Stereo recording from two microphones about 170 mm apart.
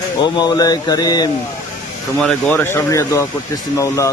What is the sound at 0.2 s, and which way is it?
Speech, 25° left (ahead or behind).